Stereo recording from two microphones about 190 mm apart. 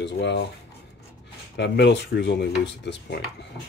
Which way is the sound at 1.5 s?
65° left (ahead or behind).